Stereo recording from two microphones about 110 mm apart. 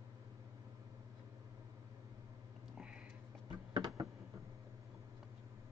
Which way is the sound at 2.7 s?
10° right (ahead or behind).